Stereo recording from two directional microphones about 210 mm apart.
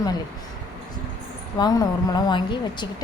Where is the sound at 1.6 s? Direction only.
15° left (ahead or behind).